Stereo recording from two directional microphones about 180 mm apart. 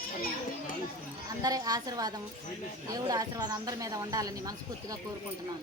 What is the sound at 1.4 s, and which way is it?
A woman's voice, 20° right (ahead or behind).